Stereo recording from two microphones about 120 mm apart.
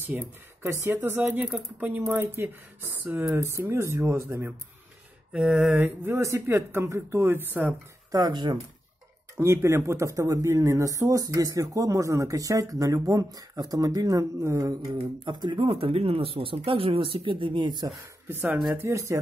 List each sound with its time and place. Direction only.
0.1 s speech: 20° right (ahead or behind)
5.3 s speech: 5° right (ahead or behind)
8.1 s speech: 35° right (ahead or behind)
9.4 s speech: 25° right (ahead or behind)
14.9 s speech: 40° right (ahead or behind)
18.3 s speech: 15° right (ahead or behind)
18.7 s speech: 25° right (ahead or behind)